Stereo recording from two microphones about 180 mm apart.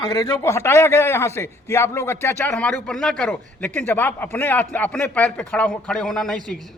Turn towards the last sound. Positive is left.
turn(degrees=5)  # may be behind; listen again after turning